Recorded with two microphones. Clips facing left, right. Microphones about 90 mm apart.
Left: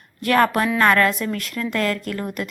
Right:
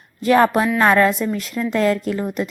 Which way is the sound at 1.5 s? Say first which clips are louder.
Right 4 dB; 5° right (ahead or behind).